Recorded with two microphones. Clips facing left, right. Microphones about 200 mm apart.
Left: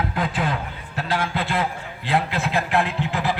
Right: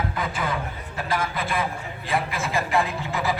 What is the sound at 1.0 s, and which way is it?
Speech, 70° left (ahead or behind).